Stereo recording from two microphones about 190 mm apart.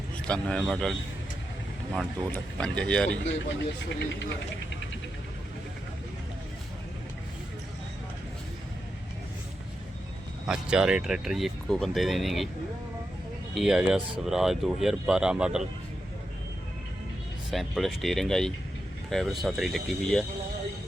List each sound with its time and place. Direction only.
0.3 s speech: 5° left (ahead or behind)
3.8 s speech: 70° left (ahead or behind)
10.4 s speech: 5° right (ahead or behind)
13.5 s speech: centre (ahead or behind)
17.5 s speech: centre (ahead or behind)